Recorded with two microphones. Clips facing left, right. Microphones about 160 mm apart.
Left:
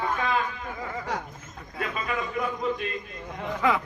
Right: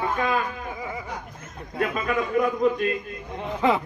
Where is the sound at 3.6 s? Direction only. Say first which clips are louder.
Right 3 dB; 25° right (ahead or behind).